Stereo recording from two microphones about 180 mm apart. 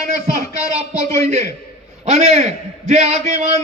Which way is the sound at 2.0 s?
40° right (ahead or behind).